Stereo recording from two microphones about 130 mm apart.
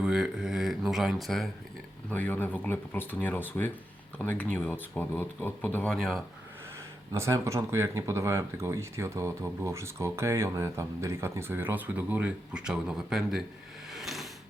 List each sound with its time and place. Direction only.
0.0 s speech: 5° right (ahead or behind)
2.0 s speech: 15° left (ahead or behind)
7.1 s speech: 25° right (ahead or behind); by 13.4 s 5° right (ahead or behind)
13.9 s a sound: centre (ahead or behind)